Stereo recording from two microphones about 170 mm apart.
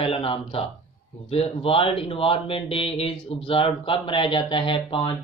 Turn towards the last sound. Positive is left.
turn(degrees=30)  # may be behind; listen again after turning